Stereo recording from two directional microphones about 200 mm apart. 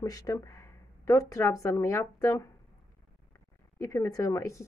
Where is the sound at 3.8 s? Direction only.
15° left (ahead or behind).